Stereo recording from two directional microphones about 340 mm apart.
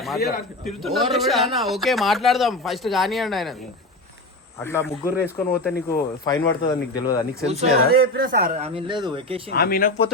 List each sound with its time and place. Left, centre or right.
0.2 s speech: left
0.6 s speech: centre
4.6 s speech: centre
5.0 s speech: centre
6.2 s speech: centre
7.4 s speech: centre
9.5 s speech: left